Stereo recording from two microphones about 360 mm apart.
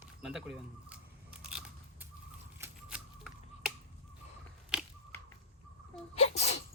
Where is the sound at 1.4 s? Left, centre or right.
Centre.